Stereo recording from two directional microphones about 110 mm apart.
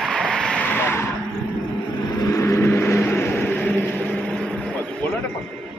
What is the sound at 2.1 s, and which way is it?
Vehicle, 25° left (ahead or behind).